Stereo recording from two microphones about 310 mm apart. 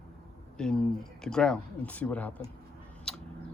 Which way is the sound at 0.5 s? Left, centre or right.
Centre.